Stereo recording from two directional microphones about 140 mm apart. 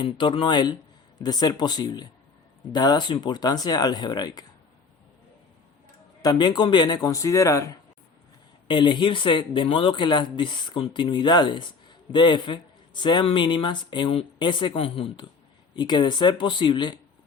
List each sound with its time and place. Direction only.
0.0 s a man's voice: 35° left (ahead or behind)
6.2 s speech: 30° left (ahead or behind)
8.6 s a man's voice: 35° left (ahead or behind)